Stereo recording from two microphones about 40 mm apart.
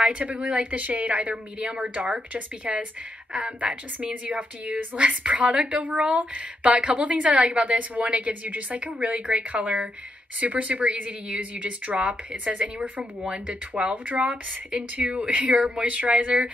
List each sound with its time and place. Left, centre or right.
0.0 s speech: right
2.6 s a woman's voice: right
7.6 s speech: right